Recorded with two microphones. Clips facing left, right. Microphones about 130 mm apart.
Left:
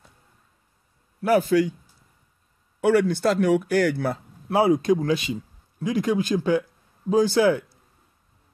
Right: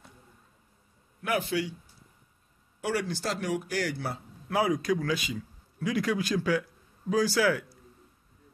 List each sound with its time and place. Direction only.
1.2 s a man's voice: 40° left (ahead or behind)
2.8 s speech: 55° left (ahead or behind)
4.5 s speech: 30° left (ahead or behind)